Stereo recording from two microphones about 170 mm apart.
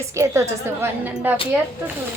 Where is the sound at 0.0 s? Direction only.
15° right (ahead or behind).